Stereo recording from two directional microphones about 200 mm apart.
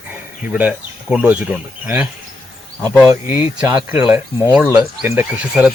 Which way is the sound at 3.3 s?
25° left (ahead or behind).